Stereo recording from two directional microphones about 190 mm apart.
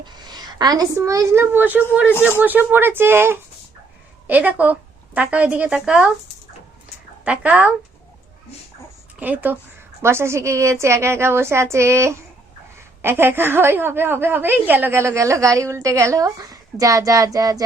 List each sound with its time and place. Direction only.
0.0 s a sound: 20° right (ahead or behind)
0.9 s a woman's voice: 15° right (ahead or behind)
7.3 s a woman's voice: 10° right (ahead or behind)
9.1 s a woman's voice: 10° right (ahead or behind)